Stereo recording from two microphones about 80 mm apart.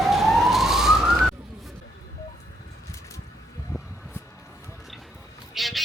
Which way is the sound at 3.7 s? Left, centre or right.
Left.